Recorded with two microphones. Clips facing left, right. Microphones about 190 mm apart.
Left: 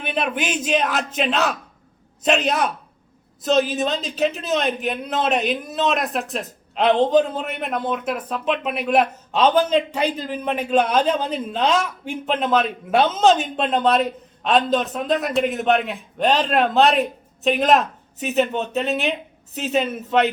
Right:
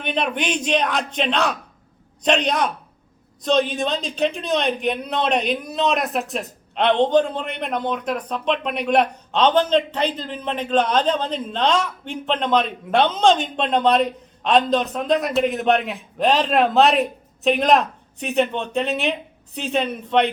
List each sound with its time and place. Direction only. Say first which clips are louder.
0.0 s a man's voice: even; 5° left (ahead or behind)